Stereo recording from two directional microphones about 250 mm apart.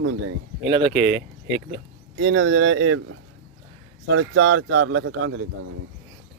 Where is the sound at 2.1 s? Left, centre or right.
Right.